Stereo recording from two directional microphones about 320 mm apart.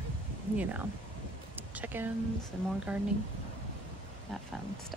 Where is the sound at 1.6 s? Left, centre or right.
Centre.